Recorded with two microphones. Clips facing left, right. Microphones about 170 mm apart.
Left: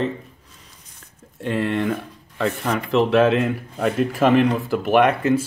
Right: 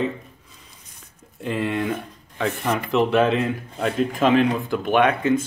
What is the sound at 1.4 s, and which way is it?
Speech, centre (ahead or behind).